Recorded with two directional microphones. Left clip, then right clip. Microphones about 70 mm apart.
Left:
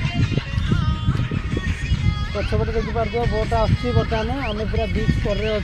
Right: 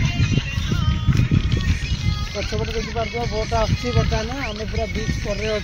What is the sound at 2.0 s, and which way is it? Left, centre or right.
Music, left.